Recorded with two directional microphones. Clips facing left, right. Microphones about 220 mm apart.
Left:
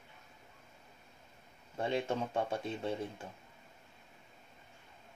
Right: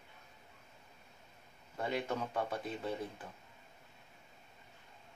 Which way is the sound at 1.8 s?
25° left (ahead or behind).